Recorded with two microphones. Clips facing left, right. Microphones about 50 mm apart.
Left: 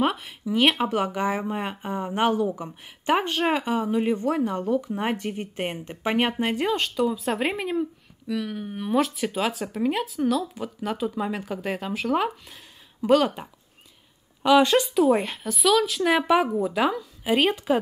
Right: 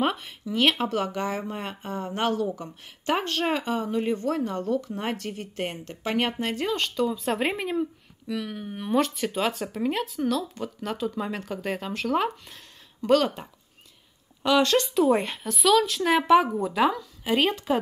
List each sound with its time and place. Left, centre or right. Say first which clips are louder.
0.0 s speech: left 2 dB; centre